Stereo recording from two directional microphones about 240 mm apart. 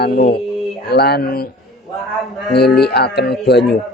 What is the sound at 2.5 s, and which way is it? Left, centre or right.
Speech, left.